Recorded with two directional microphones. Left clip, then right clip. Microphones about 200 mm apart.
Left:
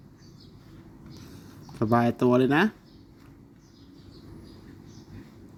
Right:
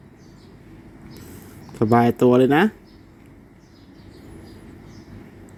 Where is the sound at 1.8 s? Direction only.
10° right (ahead or behind).